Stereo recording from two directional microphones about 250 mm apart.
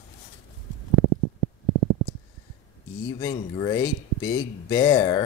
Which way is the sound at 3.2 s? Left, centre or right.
Centre.